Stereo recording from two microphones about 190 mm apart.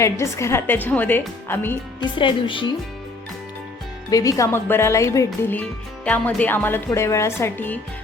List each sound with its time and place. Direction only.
0.0 s a woman's voice: 15° left (ahead or behind)
2.0 s a woman's voice: 25° left (ahead or behind)
4.1 s a woman's voice: 20° left (ahead or behind)